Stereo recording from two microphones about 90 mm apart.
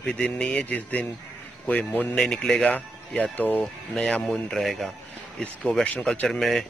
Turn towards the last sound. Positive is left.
turn(degrees=5)  # may be behind; listen again after turning